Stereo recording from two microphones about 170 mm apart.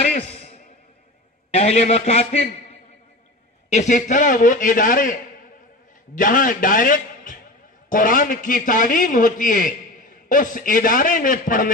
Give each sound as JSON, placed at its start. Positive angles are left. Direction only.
{"t": 0.1, "sound": "a sound", "side_deg": 35}
{"t": 1.5, "sound": "a man's voice", "side_deg": 40}
{"t": 3.7, "sound": "a man's voice", "side_deg": 45}
{"t": 6.1, "sound": "a man's voice", "side_deg": 50}